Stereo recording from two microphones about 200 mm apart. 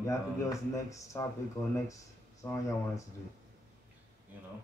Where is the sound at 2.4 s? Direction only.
15° left (ahead or behind).